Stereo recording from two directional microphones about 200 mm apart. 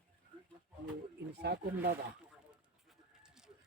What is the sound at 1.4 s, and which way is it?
Speech, 55° right (ahead or behind).